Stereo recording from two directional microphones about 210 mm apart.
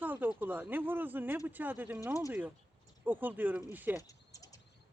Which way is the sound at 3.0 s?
10° right (ahead or behind).